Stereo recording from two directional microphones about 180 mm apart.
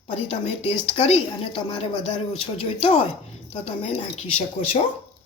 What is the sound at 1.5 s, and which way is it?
Speech, 25° left (ahead or behind).